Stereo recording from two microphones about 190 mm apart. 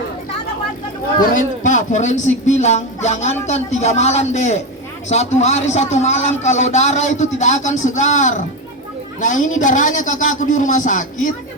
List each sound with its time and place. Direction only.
1.2 s a man's voice: 45° left (ahead or behind)